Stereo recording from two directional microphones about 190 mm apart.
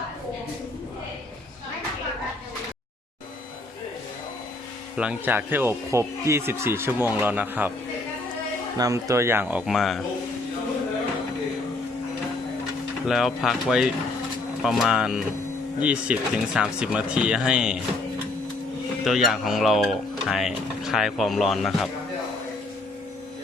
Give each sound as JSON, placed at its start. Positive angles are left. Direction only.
{"t": 4.9, "sound": "speech", "side_deg": -5}
{"t": 8.8, "sound": "speech", "side_deg": -15}
{"t": 13.1, "sound": "speech", "side_deg": 0}
{"t": 19.0, "sound": "speech", "side_deg": 0}